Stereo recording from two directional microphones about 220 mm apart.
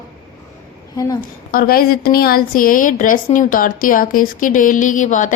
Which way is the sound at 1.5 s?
40° left (ahead or behind).